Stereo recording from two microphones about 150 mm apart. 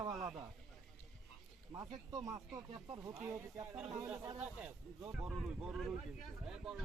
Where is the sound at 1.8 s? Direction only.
25° right (ahead or behind).